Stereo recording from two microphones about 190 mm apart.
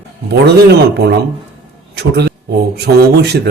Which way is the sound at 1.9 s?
60° right (ahead or behind).